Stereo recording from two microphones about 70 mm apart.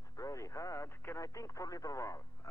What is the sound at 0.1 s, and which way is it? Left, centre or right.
Speech, left.